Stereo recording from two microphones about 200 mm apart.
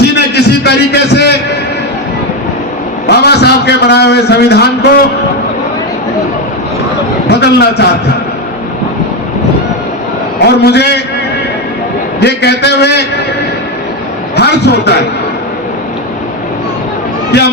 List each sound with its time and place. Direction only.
0.2 s a sound: 55° left (ahead or behind)
3.1 s a man's voice: 55° left (ahead or behind)
7.3 s a man's voice: 55° left (ahead or behind)
10.4 s a man's voice: 55° left (ahead or behind)
12.2 s a man's voice: 55° left (ahead or behind)
14.3 s a man's voice: 55° left (ahead or behind)
17.3 s a man's voice: 55° left (ahead or behind)